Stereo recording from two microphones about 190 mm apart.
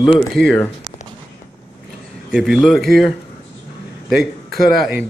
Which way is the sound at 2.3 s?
Centre (ahead or behind).